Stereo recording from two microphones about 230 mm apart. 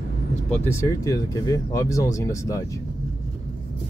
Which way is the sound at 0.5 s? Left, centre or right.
Centre.